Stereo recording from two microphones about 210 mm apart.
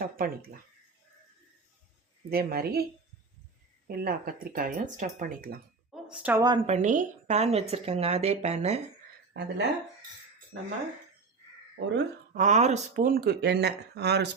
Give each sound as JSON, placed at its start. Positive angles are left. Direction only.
{"t": 0.0, "sound": "speech", "side_deg": -45}
{"t": 2.3, "sound": "speech", "side_deg": -45}
{"t": 3.8, "sound": "speech", "side_deg": -45}
{"t": 5.9, "sound": "a sound", "side_deg": -5}
{"t": 6.7, "sound": "a woman's voice", "side_deg": -35}
{"t": 9.3, "sound": "speech", "side_deg": -55}
{"t": 11.8, "sound": "speech", "side_deg": -60}
{"t": 12.3, "sound": "speech", "side_deg": -35}